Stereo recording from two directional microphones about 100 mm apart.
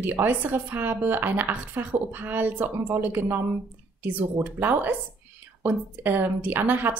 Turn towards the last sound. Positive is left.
turn(degrees=-20)  # may be behind; listen again after turning